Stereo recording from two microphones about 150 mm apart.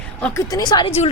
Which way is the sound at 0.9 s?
45° left (ahead or behind).